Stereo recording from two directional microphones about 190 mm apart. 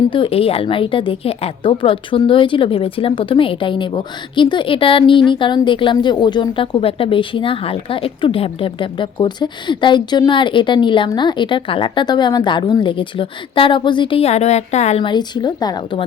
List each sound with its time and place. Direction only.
0.1 s a woman's voice: 30° left (ahead or behind)